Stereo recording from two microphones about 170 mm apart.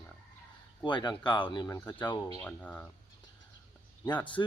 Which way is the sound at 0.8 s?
25° left (ahead or behind).